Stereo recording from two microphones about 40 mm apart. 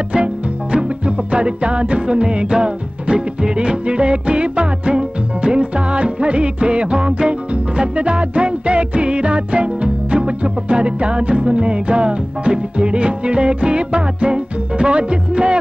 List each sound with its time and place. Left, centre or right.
0.1 s music: right